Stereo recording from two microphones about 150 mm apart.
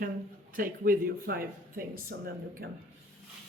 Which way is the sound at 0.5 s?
70° right (ahead or behind).